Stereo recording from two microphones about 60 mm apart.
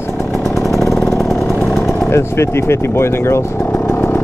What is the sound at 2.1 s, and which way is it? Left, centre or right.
Speech, left.